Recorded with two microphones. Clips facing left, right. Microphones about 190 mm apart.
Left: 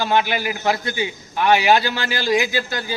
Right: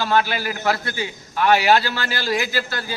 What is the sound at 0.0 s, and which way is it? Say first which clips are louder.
A man's voice: left 1 dB; 15° left (ahead or behind).